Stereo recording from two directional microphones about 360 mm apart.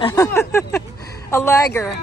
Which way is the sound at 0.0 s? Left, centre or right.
Centre.